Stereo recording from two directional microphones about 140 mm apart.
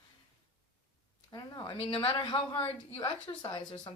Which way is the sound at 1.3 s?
30° left (ahead or behind).